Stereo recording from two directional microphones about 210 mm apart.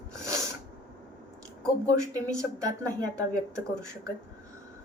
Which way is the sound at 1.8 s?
15° right (ahead or behind).